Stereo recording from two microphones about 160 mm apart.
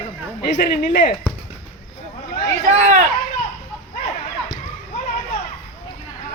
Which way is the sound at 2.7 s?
45° right (ahead or behind).